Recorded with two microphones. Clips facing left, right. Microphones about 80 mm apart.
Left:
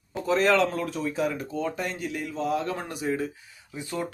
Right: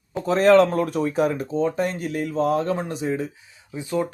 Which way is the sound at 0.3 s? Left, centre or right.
Right.